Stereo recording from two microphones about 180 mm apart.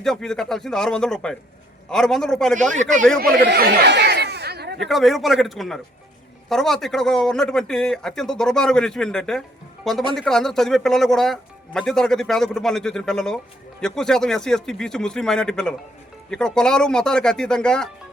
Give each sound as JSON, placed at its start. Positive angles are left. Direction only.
{"t": 0.0, "sound": "speech", "side_deg": 5}
{"t": 3.2, "sound": "a sound", "side_deg": -60}
{"t": 4.8, "sound": "speech", "side_deg": 0}